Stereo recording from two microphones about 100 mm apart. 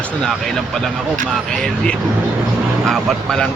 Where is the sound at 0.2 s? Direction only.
5° left (ahead or behind).